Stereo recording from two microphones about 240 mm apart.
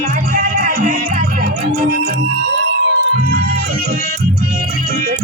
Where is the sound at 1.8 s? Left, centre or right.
Right.